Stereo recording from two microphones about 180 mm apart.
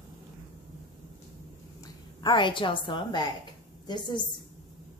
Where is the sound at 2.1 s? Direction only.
25° left (ahead or behind).